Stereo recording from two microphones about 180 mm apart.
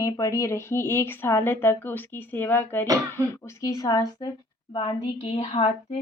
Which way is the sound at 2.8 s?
20° right (ahead or behind).